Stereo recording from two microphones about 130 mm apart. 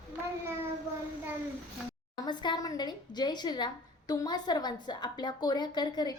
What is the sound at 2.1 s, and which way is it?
Speech, 35° left (ahead or behind).